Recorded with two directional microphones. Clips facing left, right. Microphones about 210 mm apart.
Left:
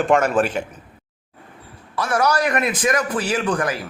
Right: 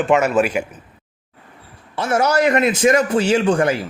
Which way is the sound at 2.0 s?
25° right (ahead or behind).